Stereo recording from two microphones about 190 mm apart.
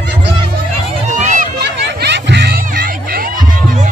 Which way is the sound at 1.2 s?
45° right (ahead or behind).